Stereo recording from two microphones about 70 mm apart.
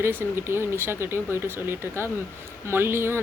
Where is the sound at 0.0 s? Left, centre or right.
Right.